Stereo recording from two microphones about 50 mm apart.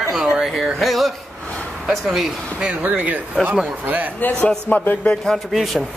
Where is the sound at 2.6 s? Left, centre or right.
Right.